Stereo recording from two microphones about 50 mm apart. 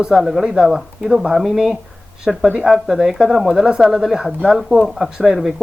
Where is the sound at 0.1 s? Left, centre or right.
Centre.